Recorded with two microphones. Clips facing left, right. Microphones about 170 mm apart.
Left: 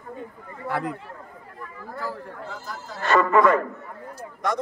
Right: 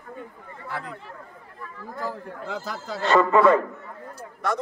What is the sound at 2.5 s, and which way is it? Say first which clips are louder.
Speech: right 5 dB; 85° right.